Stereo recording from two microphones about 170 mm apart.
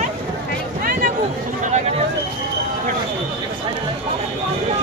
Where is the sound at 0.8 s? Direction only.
50° right (ahead or behind).